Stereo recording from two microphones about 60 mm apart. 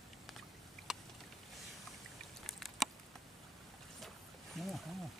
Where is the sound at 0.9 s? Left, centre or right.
Centre.